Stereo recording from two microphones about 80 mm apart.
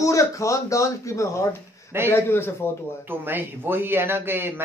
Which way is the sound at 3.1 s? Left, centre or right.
Right.